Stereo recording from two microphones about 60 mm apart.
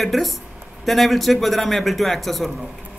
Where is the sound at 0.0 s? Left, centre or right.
Centre.